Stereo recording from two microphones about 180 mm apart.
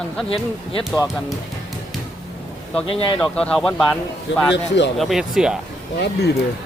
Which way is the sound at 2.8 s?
30° left (ahead or behind).